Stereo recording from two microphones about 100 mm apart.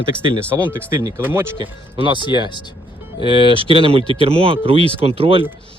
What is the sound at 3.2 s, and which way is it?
Speech, 60° right (ahead or behind).